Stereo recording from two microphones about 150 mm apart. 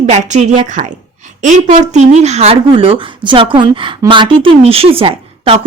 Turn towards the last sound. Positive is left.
turn(degrees=-40)  # may be behind; listen again after turning